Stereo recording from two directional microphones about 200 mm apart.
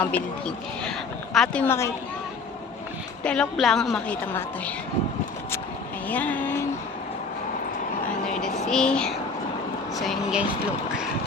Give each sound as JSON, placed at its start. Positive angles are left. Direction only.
{"t": 0.0, "sound": "speech", "side_deg": 5}
{"t": 3.2, "sound": "speech", "side_deg": 5}
{"t": 6.1, "sound": "vehicle", "side_deg": 10}
{"t": 8.7, "sound": "speech", "side_deg": 5}